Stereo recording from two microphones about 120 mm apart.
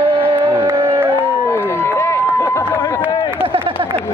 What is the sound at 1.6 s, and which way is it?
Run, 20° left (ahead or behind).